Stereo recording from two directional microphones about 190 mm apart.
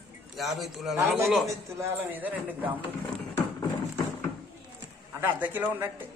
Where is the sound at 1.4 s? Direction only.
10° right (ahead or behind).